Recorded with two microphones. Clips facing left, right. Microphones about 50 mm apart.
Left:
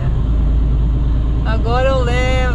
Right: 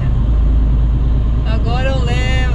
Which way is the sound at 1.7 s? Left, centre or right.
Centre.